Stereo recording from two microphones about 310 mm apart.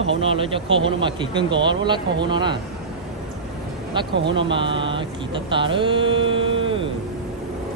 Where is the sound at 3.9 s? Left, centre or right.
Centre.